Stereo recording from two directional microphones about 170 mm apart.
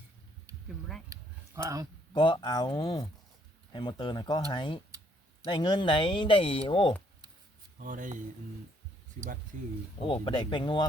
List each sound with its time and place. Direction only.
1.1 s a sound: 20° right (ahead or behind)
2.1 s speech: 25° left (ahead or behind)
7.8 s speech: 50° right (ahead or behind)
10.0 s speech: 30° left (ahead or behind)